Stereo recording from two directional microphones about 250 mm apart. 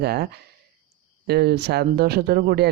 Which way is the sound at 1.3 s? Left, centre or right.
Right.